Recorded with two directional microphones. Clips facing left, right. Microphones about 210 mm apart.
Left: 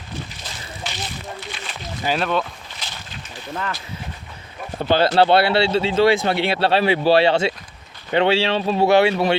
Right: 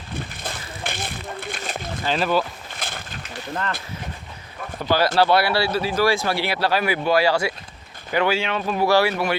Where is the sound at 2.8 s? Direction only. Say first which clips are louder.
Right 4 dB; 55° right (ahead or behind).